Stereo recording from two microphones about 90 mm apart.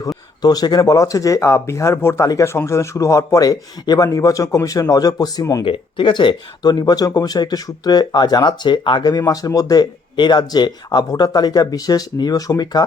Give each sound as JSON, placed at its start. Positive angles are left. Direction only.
{"t": 0.4, "sound": "speech", "side_deg": 50}
{"t": 5.6, "sound": "speech", "side_deg": 65}